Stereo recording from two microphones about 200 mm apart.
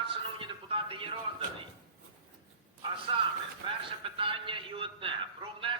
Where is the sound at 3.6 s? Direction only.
25° right (ahead or behind).